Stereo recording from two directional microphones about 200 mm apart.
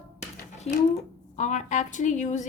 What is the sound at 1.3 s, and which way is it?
A woman's voice, 35° left (ahead or behind).